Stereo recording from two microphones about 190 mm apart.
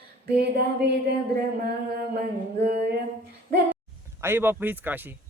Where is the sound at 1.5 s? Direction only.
55° right (ahead or behind).